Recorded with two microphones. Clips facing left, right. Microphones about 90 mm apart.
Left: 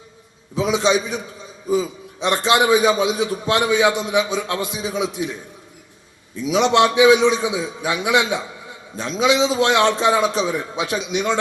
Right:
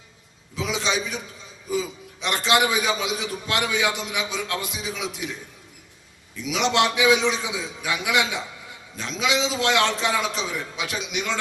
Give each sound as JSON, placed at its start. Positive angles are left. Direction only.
{"t": 0.5, "sound": "a man's voice", "side_deg": 25}